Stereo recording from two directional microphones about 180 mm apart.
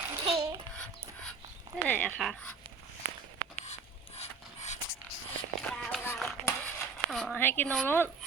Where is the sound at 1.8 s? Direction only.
10° left (ahead or behind).